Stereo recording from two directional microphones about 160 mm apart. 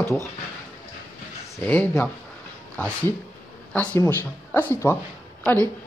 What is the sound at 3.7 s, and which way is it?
Speech, 10° left (ahead or behind).